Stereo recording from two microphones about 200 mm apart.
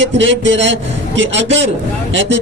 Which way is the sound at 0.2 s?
65° right (ahead or behind).